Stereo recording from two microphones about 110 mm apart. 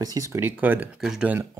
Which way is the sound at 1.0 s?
5° right (ahead or behind).